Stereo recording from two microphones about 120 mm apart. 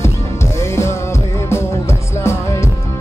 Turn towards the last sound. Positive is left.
turn(degrees=25)  # may be behind; listen again after turning